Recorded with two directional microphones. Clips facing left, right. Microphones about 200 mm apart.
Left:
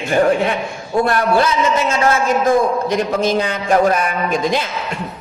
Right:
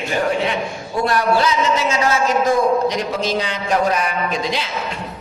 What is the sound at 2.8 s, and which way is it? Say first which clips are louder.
A man's voice: left 3 dB; 50° left (ahead or behind).